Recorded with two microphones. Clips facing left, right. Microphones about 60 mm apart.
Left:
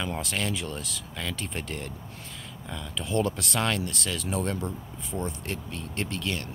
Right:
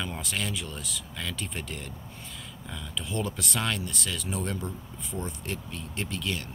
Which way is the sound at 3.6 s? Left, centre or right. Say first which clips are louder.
Left 4 dB; left.